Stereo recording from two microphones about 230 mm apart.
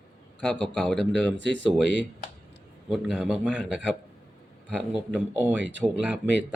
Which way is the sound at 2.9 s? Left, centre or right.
Centre.